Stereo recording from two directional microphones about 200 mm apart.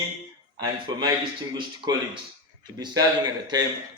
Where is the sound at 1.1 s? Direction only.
20° right (ahead or behind).